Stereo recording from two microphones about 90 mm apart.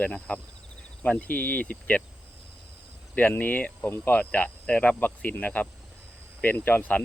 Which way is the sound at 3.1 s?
20° left (ahead or behind).